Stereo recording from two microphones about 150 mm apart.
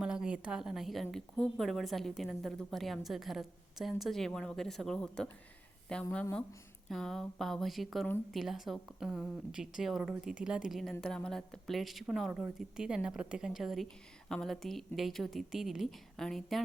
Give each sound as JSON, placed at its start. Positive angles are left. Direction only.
{"t": 0.0, "sound": "a woman's voice", "side_deg": -5}